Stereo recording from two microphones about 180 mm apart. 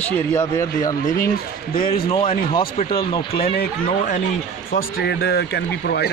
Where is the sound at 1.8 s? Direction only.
55° left (ahead or behind).